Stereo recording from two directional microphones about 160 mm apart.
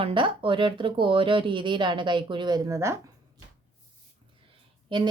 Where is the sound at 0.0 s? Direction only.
30° right (ahead or behind).